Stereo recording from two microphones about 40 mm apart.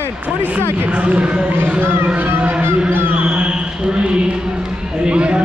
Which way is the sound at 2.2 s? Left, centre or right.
Right.